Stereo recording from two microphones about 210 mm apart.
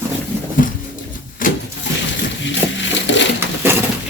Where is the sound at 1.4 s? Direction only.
40° left (ahead or behind).